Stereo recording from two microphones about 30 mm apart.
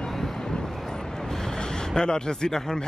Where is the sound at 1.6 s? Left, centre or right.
Left.